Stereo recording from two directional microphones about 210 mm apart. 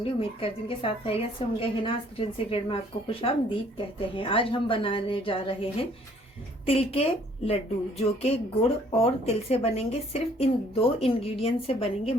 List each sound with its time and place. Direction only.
0.0 s a woman's voice: 25° left (ahead or behind)
6.7 s a woman's voice: 30° left (ahead or behind)